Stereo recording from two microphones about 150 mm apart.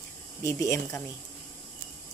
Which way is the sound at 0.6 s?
20° left (ahead or behind).